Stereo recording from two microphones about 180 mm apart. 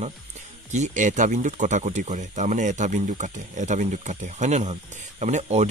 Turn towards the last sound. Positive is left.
turn(degrees=-40)  # may be behind; listen again after turning